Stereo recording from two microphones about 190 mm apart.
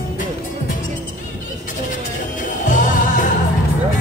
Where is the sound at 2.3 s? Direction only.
45° left (ahead or behind).